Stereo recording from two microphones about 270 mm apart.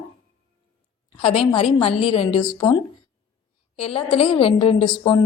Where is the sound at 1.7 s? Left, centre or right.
Left.